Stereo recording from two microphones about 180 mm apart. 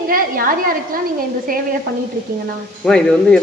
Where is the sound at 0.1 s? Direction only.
50° right (ahead or behind).